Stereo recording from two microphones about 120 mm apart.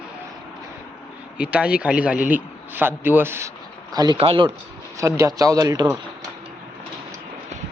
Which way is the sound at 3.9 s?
35° right (ahead or behind).